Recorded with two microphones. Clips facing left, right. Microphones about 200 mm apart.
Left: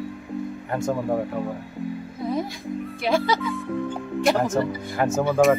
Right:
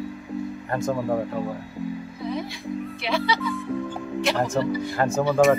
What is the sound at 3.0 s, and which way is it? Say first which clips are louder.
Speech: left 4 dB; 45° left (ahead or behind).